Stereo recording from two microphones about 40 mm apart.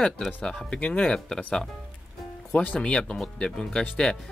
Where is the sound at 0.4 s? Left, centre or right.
Left.